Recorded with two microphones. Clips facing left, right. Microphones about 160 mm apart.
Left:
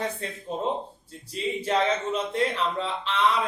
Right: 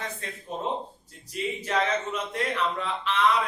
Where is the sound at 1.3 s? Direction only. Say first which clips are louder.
Left 3 dB; 30° left (ahead or behind).